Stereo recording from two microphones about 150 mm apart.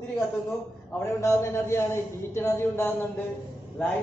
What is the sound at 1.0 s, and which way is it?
A man's voice, 20° left (ahead or behind).